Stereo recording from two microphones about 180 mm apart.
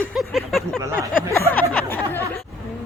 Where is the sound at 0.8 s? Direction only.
15° right (ahead or behind).